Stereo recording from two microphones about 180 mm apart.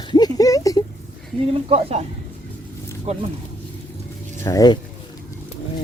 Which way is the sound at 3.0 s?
35° right (ahead or behind).